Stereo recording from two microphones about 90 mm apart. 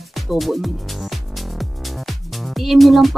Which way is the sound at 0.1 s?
Centre (ahead or behind).